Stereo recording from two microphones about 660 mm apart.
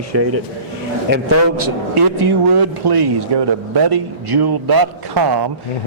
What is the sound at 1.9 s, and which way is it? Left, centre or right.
A man's voice, right.